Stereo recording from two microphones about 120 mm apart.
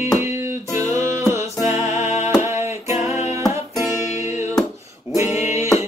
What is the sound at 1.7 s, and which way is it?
Music, 65° left (ahead or behind).